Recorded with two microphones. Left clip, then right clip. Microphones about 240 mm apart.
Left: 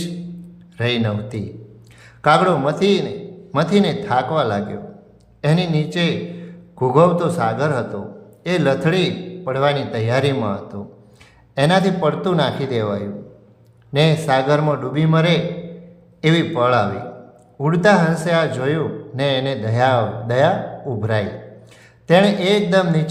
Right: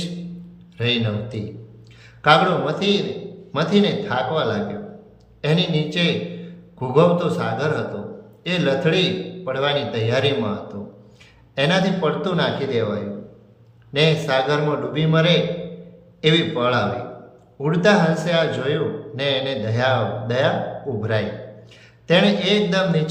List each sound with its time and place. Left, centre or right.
0.8 s a man's voice: centre